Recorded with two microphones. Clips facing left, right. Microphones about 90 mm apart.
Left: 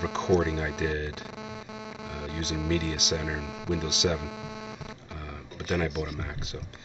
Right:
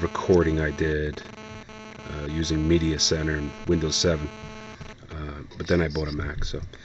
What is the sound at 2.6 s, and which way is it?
Speech, 45° right (ahead or behind).